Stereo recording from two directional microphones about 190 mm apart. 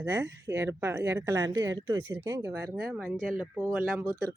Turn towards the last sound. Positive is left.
turn(degrees=-15)  # may be behind; listen again after turning